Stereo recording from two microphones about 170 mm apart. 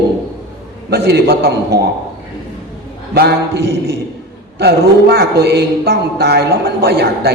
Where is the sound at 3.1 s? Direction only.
70° right (ahead or behind).